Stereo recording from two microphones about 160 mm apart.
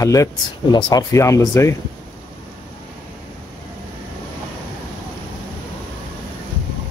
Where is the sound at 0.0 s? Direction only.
20° left (ahead or behind).